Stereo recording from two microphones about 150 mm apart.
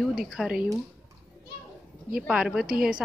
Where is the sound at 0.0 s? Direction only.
5° right (ahead or behind).